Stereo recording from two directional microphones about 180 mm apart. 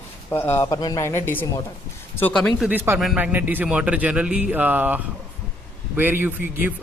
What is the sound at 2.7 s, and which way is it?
A man's voice, 10° right (ahead or behind).